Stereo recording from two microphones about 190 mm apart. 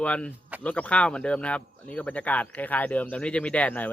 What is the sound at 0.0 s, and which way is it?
Speech, 5° left (ahead or behind).